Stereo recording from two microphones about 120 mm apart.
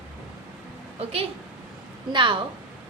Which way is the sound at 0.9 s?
55° right (ahead or behind).